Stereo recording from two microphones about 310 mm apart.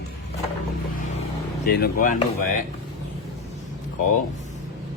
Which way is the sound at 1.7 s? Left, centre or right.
Left.